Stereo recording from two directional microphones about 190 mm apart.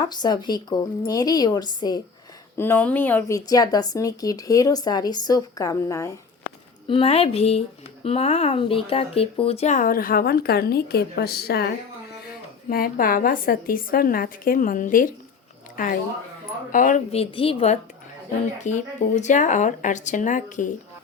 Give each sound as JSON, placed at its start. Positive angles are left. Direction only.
{"t": 0.0, "sound": "speech", "side_deg": 20}
{"t": 2.6, "sound": "speech", "side_deg": 10}
{"t": 6.8, "sound": "speech", "side_deg": 30}